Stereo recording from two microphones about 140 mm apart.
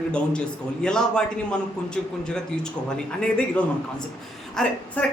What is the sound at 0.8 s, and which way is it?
A man's voice, 5° left (ahead or behind).